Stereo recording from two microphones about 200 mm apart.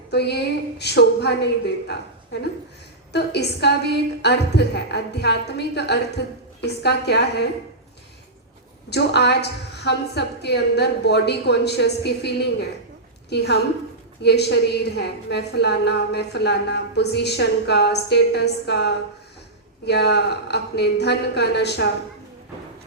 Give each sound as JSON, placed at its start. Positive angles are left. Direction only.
{"t": 0.1, "sound": "a woman's voice", "side_deg": 55}
{"t": 8.9, "sound": "a woman's voice", "side_deg": 55}